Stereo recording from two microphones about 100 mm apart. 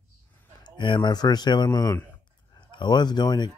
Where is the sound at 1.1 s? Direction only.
45° left (ahead or behind).